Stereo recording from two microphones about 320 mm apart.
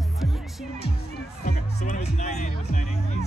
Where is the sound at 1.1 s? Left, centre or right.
Left.